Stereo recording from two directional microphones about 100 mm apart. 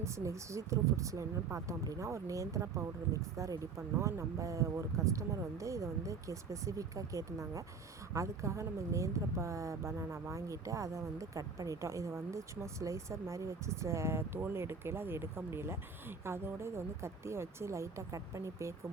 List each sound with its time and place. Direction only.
0.0 s speech: 30° right (ahead or behind)